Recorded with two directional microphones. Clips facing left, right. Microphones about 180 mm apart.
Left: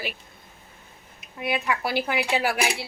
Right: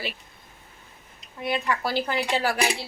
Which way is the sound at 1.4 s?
5° left (ahead or behind).